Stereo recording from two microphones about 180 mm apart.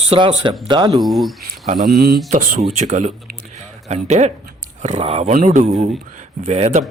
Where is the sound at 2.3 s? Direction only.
45° right (ahead or behind).